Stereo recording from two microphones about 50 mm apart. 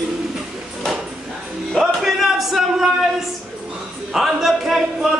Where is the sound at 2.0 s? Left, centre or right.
Centre.